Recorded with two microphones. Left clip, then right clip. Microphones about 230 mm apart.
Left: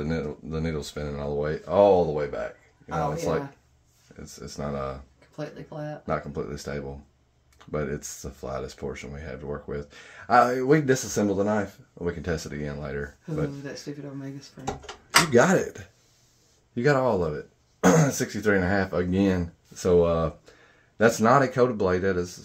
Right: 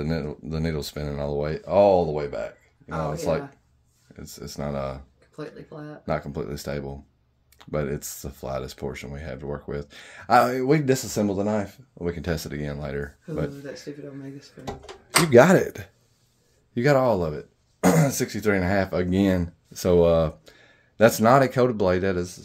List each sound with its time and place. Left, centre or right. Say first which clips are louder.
0.0 s speech: right 1 dB; right
5.3 s speech: left 1 dB; left
6.0 s speech: right 2 dB; right
15.2 s speech: right 5 dB; right